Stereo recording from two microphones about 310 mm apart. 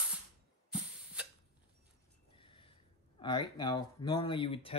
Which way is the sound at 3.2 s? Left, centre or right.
Centre.